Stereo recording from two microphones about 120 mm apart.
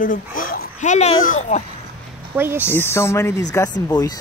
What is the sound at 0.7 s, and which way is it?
Speech, 75° left (ahead or behind).